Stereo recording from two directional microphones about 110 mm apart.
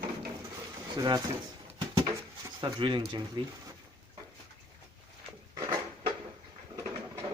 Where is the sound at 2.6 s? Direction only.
45° right (ahead or behind).